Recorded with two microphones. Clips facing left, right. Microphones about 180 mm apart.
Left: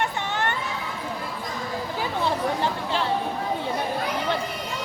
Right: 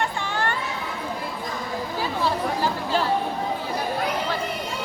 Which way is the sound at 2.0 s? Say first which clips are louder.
Right 1 dB; 20° left (ahead or behind).